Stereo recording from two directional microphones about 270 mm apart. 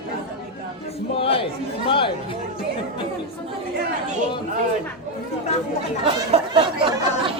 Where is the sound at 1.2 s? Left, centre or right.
Centre.